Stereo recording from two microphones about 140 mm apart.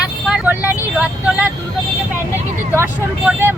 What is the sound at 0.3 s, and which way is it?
Vehicle, 10° right (ahead or behind).